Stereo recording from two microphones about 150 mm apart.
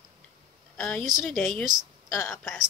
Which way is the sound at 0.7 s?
5° left (ahead or behind).